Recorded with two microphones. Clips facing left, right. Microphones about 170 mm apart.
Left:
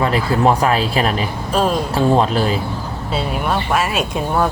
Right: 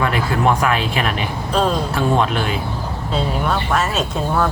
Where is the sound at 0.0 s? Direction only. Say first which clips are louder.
Left 2 dB; 30° left (ahead or behind).